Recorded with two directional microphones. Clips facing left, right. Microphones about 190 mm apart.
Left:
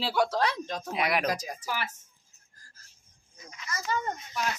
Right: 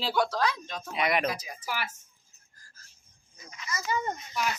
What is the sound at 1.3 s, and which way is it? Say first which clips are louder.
Speech: left 3 dB; 40° left (ahead or behind).